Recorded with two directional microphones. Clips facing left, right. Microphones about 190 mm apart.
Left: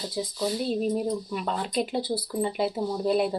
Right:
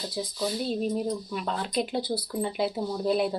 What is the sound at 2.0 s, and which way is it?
Speech, 25° left (ahead or behind).